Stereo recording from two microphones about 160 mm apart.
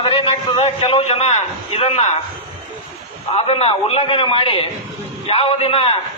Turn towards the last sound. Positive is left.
turn(degrees=35)  # may be behind; listen again after turning